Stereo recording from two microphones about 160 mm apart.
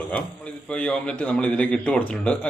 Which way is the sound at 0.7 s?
5° left (ahead or behind).